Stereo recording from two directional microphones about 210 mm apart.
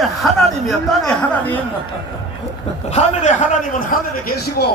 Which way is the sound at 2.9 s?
35° left (ahead or behind).